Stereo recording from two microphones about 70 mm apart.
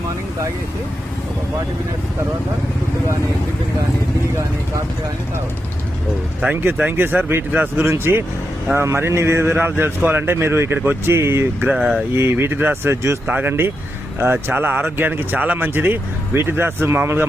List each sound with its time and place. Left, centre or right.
6.5 s speech: right
11.8 s speech: centre
12.1 s speech: right
13.2 s speech: right